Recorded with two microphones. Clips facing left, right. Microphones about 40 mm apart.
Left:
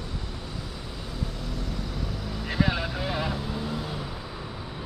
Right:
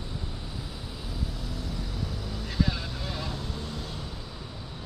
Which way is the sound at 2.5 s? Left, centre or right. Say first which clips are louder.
Left 4 dB; left.